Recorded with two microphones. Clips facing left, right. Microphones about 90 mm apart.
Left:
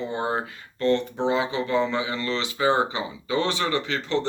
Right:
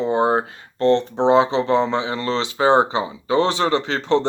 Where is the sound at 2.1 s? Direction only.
45° right (ahead or behind).